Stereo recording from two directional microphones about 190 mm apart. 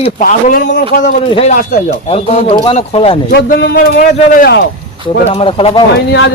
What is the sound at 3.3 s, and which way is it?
A man's voice, 55° left (ahead or behind).